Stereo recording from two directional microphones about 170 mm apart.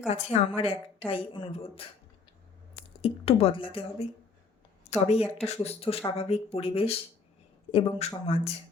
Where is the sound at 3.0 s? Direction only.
35° left (ahead or behind).